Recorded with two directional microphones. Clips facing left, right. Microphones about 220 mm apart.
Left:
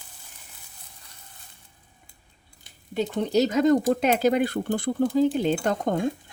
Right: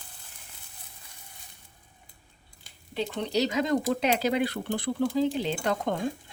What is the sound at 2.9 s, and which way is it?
Speech, 45° left (ahead or behind).